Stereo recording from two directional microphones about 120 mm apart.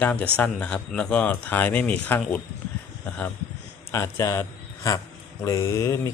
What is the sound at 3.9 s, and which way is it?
Mantra, 25° left (ahead or behind).